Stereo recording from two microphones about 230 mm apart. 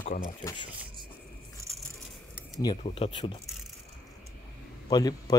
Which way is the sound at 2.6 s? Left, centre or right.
Left.